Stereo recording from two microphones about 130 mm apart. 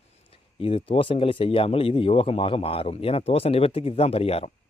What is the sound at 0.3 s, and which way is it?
Speech, 45° left (ahead or behind).